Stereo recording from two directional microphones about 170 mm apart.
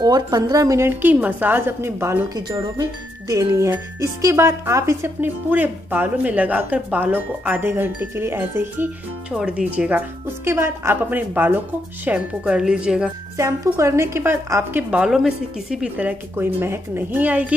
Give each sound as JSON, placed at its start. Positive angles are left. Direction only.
{"t": 0.0, "sound": "a woman's voice", "side_deg": -20}
{"t": 13.4, "sound": "a woman's voice", "side_deg": -15}